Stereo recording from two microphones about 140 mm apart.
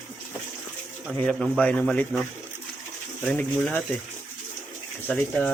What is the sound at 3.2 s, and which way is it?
Speech, 10° left (ahead or behind).